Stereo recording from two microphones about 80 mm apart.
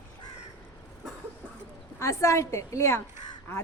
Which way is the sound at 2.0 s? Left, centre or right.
Left.